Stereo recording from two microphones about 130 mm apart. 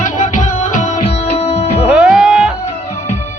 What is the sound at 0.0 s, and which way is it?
Music, 75° left (ahead or behind).